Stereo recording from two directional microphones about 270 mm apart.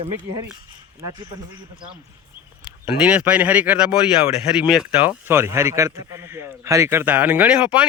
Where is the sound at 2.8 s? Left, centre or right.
Centre.